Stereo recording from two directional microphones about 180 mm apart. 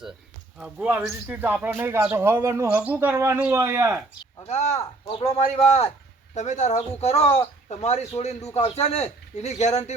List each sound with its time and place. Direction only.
0.6 s speech: 5° right (ahead or behind)
4.4 s speech: 40° left (ahead or behind)
8.4 s a man's voice: 15° left (ahead or behind)
8.7 s speech: 35° left (ahead or behind)